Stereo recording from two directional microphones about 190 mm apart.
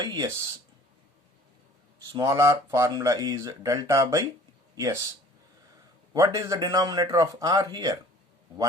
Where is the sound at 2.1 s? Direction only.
20° right (ahead or behind).